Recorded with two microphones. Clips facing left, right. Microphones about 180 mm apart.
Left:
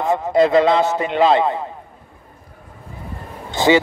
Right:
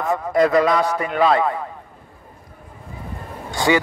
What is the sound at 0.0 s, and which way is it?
Speech, 25° left (ahead or behind).